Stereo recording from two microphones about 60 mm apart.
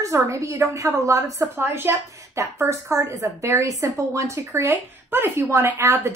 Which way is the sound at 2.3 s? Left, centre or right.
Right.